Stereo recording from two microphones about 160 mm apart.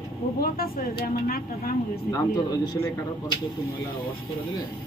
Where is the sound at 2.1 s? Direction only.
25° left (ahead or behind).